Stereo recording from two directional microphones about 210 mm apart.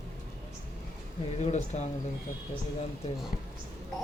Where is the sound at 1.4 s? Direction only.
35° left (ahead or behind).